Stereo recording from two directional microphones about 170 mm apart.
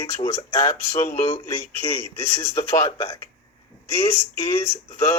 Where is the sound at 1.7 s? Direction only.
15° left (ahead or behind).